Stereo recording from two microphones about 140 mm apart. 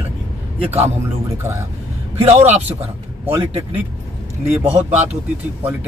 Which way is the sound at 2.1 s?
50° right (ahead or behind).